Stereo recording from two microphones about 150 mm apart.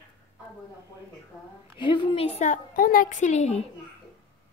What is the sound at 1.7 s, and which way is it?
Speech, 30° left (ahead or behind).